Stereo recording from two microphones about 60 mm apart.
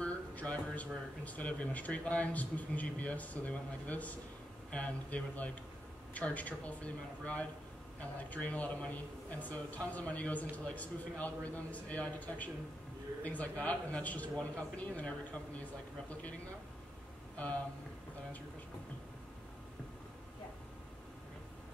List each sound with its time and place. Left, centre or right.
0.0 s speech: left